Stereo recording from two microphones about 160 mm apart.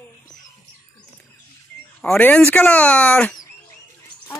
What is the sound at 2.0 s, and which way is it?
Speech, 5° left (ahead or behind).